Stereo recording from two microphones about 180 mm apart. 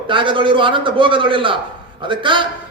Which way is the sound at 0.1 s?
25° right (ahead or behind).